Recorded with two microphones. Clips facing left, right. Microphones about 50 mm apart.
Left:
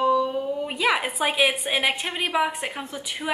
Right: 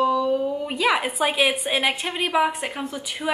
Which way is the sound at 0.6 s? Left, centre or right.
Centre.